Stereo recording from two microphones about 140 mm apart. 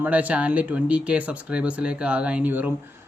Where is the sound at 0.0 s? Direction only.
10° right (ahead or behind).